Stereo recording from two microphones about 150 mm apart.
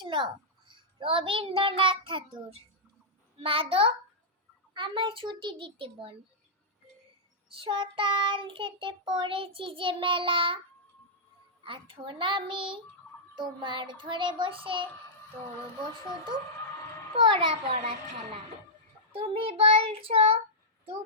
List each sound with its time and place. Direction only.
0.0 s a sound: 35° right (ahead or behind)
0.7 s child singing: 35° right (ahead or behind)
7.5 s child singing: 35° right (ahead or behind)
11.6 s child singing: 35° right (ahead or behind)
17.2 s child singing: 30° right (ahead or behind)